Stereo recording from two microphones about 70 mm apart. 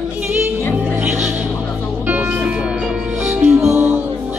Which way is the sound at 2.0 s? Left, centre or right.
Right.